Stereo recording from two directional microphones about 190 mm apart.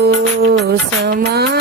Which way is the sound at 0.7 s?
55° right (ahead or behind).